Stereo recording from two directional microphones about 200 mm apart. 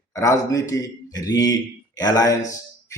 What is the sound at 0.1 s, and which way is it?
Speech, 15° left (ahead or behind).